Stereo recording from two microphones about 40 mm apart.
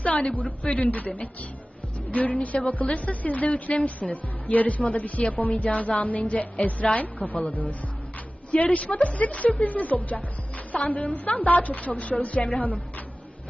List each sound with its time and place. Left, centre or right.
0.0 s a woman's voice: left